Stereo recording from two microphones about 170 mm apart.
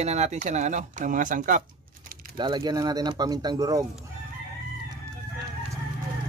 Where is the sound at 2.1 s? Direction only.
60° right (ahead or behind).